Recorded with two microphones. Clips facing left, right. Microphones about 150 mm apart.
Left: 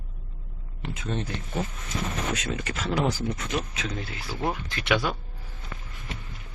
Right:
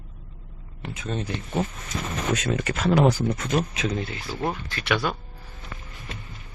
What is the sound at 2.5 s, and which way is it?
Speech, 60° right (ahead or behind).